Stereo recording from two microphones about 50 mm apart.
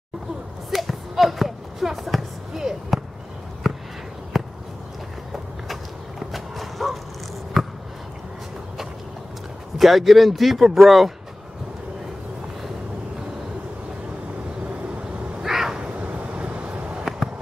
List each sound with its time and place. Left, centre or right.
0.7 s basketball bounce: centre
3.6 s a sound: centre
9.8 s speech: centre
15.4 s cat: centre
16.0 s vehicle: right